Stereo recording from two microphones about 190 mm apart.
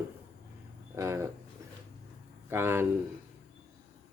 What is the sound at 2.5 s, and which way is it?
Speech, 10° right (ahead or behind).